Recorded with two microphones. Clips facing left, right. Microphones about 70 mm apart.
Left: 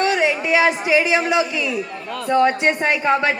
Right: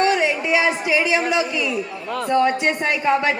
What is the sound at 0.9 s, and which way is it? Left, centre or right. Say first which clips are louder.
Speech: left 2 dB; left.